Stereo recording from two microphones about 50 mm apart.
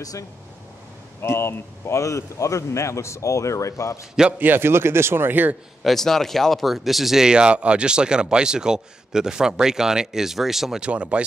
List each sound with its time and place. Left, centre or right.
1.2 s speech: left
4.4 s speech: right
5.9 s speech: centre
7.2 s speech: centre
10.8 s speech: right